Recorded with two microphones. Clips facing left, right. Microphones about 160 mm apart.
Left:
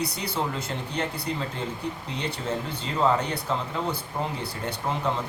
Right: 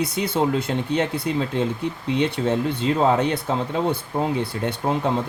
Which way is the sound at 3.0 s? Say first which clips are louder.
Right 2 dB; 70° right (ahead or behind).